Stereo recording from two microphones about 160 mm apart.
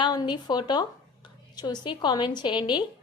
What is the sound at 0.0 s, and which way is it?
A woman's voice, 25° left (ahead or behind).